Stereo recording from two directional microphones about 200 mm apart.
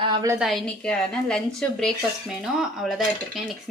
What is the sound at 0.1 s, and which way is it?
Speech, 20° right (ahead or behind).